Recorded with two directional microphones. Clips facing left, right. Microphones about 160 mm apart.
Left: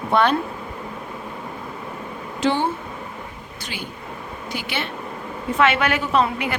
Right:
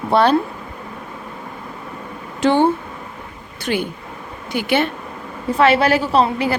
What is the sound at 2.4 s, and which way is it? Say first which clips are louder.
A woman's voice: right 6 dB; 55° right (ahead or behind).